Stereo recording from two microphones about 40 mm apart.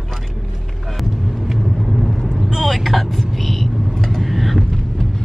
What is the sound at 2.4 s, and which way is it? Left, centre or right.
Vehicle, centre.